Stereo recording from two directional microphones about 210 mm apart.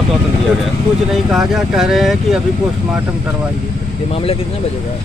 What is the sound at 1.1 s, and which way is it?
Speech, centre (ahead or behind).